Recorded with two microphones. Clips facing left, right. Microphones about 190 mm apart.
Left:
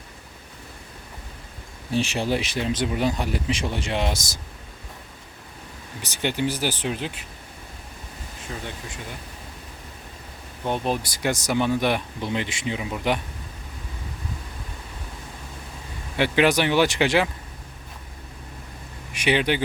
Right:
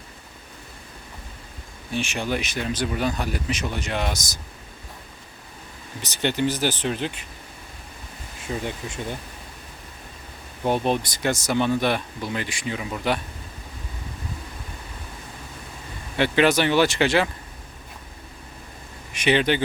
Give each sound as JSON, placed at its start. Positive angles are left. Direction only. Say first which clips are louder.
{"t": 1.9, "sound": "speech", "louder": "left 3 dB", "side_deg": 35}
{"t": 6.0, "sound": "speech", "louder": "right 2 dB", "side_deg": 10}
{"t": 8.5, "sound": "speech", "louder": "right 6 dB", "side_deg": -15}
{"t": 10.7, "sound": "speech", "louder": "right 3 dB", "side_deg": 5}
{"t": 16.1, "sound": "speech", "louder": "right 1 dB", "side_deg": 10}
{"t": 19.1, "sound": "speech", "louder": "right 2 dB", "side_deg": 10}